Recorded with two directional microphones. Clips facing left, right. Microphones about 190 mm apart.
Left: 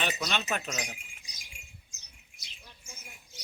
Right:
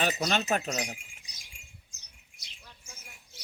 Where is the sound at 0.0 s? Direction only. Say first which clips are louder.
Right 4 dB; 40° right (ahead or behind).